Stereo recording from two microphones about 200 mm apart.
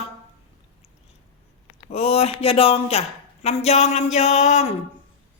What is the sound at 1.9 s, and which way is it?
A woman's voice, 30° left (ahead or behind).